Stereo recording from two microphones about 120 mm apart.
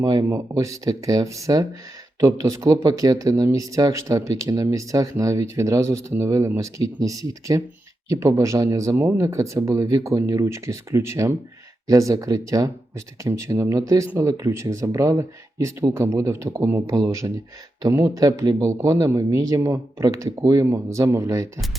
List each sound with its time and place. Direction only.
0.0 s speech: 35° right (ahead or behind)
9.0 s speech: 15° right (ahead or behind)
9.2 s speech: 30° right (ahead or behind)